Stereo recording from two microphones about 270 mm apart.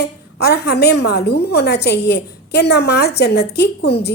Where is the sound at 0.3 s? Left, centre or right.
Left.